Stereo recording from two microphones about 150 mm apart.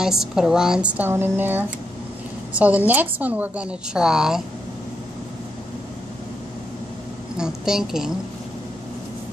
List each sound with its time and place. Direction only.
0.0 s a woman's voice: 5° right (ahead or behind)
7.3 s a woman's voice: 5° right (ahead or behind)